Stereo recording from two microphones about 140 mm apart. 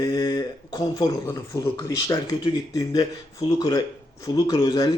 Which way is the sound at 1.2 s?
20° left (ahead or behind).